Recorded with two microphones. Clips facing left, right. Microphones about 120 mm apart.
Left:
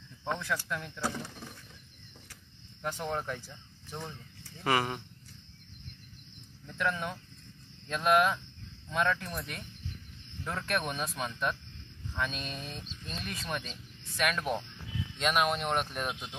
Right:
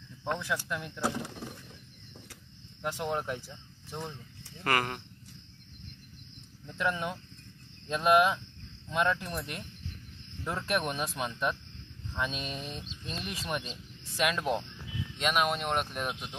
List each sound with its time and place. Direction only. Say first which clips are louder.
0.4 s speech: right 1 dB; 10° right (ahead or behind)
2.8 s speech: right 2 dB; 15° right (ahead or behind)
4.6 s speech: left 1 dB; centre (ahead or behind)
6.7 s speech: right 1 dB; 15° right (ahead or behind)
11.0 s speech: right 1 dB; 15° right (ahead or behind)
12.8 s speech: right 2 dB; centre (ahead or behind)
13.5 s speech: right 3 dB; 15° right (ahead or behind)
15.1 s speech: even; centre (ahead or behind)